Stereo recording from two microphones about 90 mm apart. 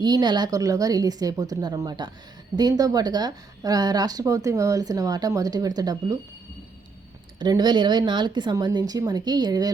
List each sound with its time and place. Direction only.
0.0 s a woman's voice: 50° right (ahead or behind)
7.3 s a woman's voice: 50° right (ahead or behind)